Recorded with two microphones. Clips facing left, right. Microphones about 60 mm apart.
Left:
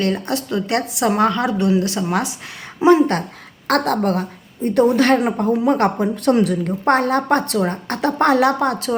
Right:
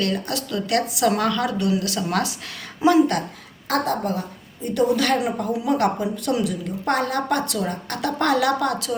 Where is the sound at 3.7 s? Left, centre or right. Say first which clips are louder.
Left 5 dB; left.